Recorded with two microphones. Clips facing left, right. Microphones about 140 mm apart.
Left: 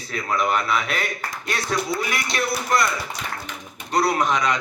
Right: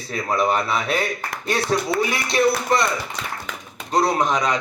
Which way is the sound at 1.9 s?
65° right (ahead or behind).